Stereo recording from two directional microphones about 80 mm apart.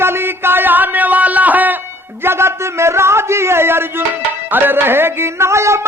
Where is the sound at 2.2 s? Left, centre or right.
Right.